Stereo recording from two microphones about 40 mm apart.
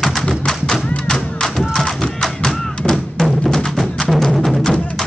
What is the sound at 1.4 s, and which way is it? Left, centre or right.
Music, centre.